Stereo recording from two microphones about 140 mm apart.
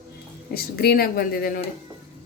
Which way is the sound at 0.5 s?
90° left.